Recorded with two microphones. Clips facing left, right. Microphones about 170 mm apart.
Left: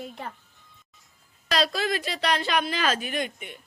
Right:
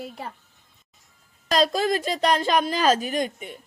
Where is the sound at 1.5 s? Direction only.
45° right (ahead or behind).